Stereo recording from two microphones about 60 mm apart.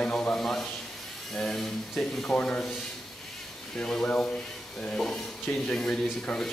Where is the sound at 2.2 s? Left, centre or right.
Centre.